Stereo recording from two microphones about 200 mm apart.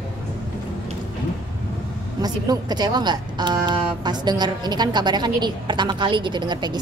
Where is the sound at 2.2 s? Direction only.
20° right (ahead or behind).